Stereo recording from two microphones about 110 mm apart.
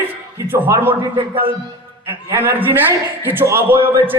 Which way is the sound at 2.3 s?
20° right (ahead or behind).